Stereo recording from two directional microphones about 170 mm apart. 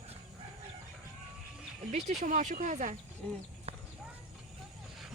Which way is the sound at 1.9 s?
45° right (ahead or behind).